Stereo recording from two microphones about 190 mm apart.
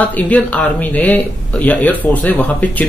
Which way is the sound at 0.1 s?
5° left (ahead or behind).